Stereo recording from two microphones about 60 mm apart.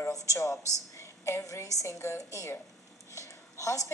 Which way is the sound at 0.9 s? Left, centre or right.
Left.